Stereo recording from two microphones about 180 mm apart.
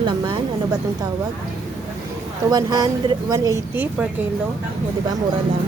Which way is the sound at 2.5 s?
20° right (ahead or behind).